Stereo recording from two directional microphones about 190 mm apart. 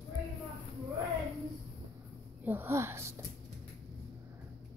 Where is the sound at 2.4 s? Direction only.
10° right (ahead or behind).